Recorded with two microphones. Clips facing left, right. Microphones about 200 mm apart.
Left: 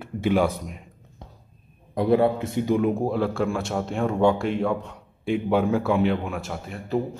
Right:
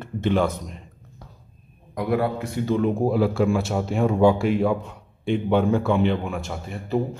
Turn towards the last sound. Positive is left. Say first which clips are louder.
# right 1 dB
turn(degrees=0)  # may be behind; listen again after turning